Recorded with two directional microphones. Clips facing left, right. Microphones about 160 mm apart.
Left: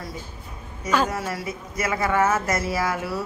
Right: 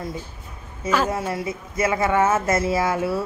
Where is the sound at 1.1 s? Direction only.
25° right (ahead or behind).